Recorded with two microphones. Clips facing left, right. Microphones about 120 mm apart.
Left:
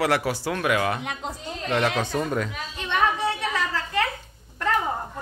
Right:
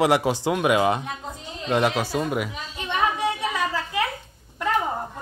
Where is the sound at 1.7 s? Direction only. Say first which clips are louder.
Right 2 dB; 15° right (ahead or behind).